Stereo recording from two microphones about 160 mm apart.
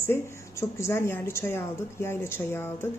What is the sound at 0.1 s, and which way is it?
A woman's voice, 15° left (ahead or behind).